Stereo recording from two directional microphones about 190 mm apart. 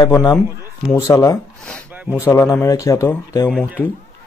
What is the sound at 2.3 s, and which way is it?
Speech, 15° left (ahead or behind).